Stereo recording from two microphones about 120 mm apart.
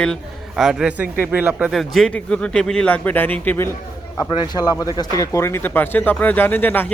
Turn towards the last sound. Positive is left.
turn(degrees=15)  # may be behind; listen again after turning